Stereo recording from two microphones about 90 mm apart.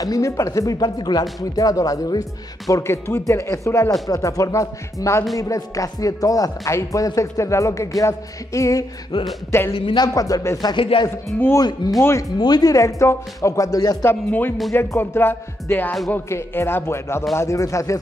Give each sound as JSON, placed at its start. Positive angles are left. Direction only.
{"t": 0.0, "sound": "speech", "side_deg": 40}
{"t": 9.1, "sound": "speech", "side_deg": 50}
{"t": 9.7, "sound": "speech", "side_deg": 65}
{"t": 10.0, "sound": "speech", "side_deg": 45}
{"t": 10.7, "sound": "speech", "side_deg": 70}
{"t": 11.5, "sound": "speech", "side_deg": 50}
{"t": 12.0, "sound": "speech", "side_deg": 30}
{"t": 12.4, "sound": "speech", "side_deg": 50}
{"t": 14.0, "sound": "music", "side_deg": 20}
{"t": 17.4, "sound": "speech", "side_deg": 35}